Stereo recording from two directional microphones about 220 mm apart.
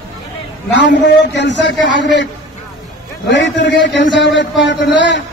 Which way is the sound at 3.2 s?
55° left (ahead or behind).